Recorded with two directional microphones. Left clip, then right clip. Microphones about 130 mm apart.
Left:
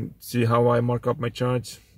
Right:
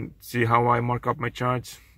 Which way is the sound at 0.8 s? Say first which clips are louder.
Left 1 dB; centre (ahead or behind).